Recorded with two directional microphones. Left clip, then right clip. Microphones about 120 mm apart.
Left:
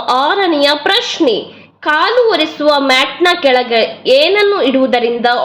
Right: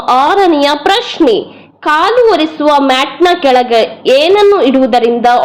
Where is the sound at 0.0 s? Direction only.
35° right (ahead or behind).